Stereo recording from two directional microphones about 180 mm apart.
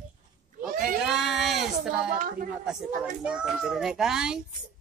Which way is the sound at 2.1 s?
50° right (ahead or behind).